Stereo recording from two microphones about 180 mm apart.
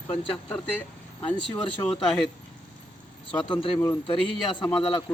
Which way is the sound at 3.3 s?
30° left (ahead or behind).